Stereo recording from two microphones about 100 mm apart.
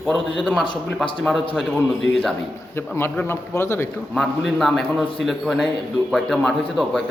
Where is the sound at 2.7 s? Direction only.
25° left (ahead or behind).